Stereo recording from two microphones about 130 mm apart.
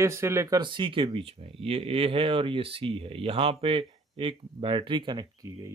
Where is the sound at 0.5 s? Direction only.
40° right (ahead or behind).